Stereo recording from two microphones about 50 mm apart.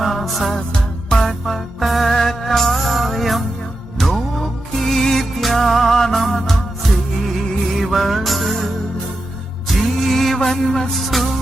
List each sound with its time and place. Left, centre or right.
0.0 s music: centre
9.6 s music: centre